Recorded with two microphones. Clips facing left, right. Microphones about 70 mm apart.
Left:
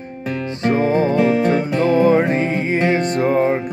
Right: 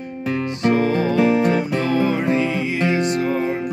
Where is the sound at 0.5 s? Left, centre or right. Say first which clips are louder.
Left 2 dB; left.